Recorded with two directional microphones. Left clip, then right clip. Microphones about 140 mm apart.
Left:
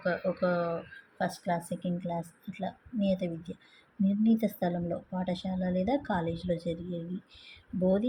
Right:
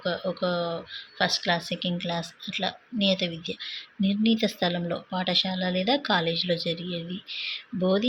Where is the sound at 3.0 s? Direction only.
35° left (ahead or behind).